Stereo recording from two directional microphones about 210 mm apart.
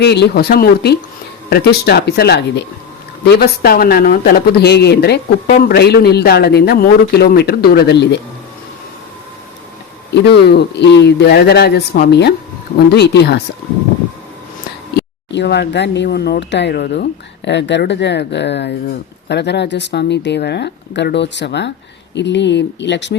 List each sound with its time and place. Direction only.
0.0 s a man's voice: 55° left (ahead or behind)
10.2 s a man's voice: 50° left (ahead or behind)
14.9 s speech: 50° left (ahead or behind)